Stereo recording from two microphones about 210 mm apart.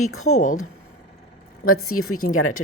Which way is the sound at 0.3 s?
40° left (ahead or behind).